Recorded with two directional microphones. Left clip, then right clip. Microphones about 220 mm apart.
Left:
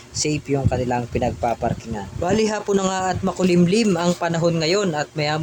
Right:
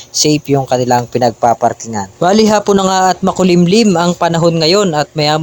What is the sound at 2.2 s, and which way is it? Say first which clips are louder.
Speech: right 11 dB; 35° right (ahead or behind).